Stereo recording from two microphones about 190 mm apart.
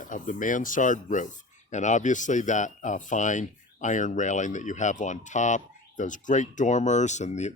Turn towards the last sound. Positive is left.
turn(degrees=35)  # may be behind; listen again after turning